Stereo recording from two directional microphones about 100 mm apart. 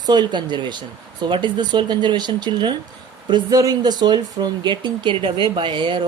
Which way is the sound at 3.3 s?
40° right (ahead or behind).